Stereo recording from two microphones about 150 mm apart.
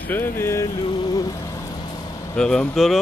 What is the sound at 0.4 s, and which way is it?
Vehicle, 20° left (ahead or behind).